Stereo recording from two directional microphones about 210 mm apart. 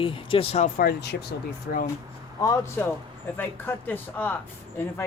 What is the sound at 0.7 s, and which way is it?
Speech, 50° left (ahead or behind).